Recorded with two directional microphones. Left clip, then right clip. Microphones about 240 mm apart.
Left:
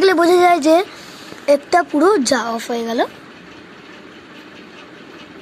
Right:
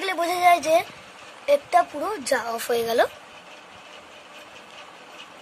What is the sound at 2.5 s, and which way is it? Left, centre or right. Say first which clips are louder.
Speech: left 2 dB; right.